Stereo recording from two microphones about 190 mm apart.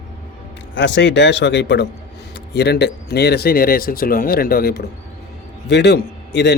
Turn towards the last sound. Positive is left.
turn(degrees=60)  # may be behind; listen again after turning